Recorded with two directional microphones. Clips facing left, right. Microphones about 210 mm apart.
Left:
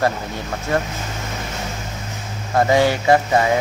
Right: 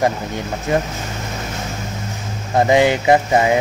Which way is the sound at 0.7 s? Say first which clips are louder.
Right 2 dB; 15° right (ahead or behind).